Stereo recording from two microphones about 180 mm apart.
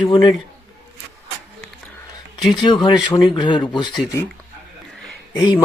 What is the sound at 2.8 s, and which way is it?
Speech, 25° left (ahead or behind).